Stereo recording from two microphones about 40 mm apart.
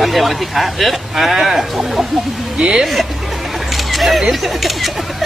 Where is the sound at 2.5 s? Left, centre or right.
Centre.